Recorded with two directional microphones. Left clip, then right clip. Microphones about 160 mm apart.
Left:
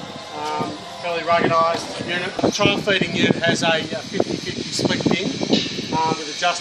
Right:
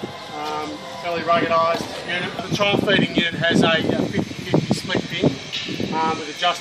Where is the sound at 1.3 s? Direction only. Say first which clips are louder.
Left 1 dB; 15° left (ahead or behind).